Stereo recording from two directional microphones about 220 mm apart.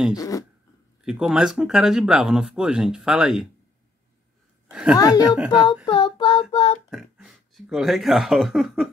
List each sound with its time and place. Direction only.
0.1 s a sound: 15° left (ahead or behind)
1.0 s speech: 5° right (ahead or behind)
4.9 s a sound: 15° left (ahead or behind)
5.5 s speech: 20° left (ahead or behind)
5.9 s child singing: 25° left (ahead or behind)
6.9 s speech: centre (ahead or behind)